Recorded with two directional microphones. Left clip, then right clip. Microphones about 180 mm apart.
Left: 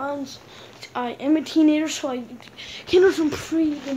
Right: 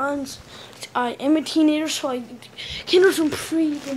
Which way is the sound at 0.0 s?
20° right (ahead or behind).